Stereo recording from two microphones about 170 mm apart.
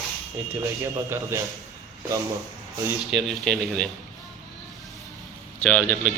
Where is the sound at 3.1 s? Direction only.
Centre (ahead or behind).